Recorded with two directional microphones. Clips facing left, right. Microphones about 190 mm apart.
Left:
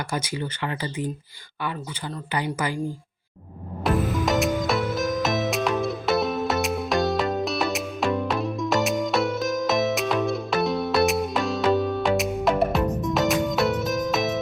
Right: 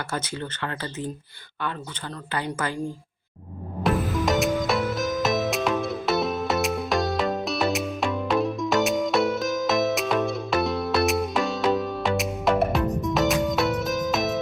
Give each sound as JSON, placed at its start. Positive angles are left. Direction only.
{"t": 0.1, "sound": "speech", "side_deg": 10}
{"t": 2.3, "sound": "speech", "side_deg": 15}
{"t": 3.8, "sound": "music", "side_deg": 0}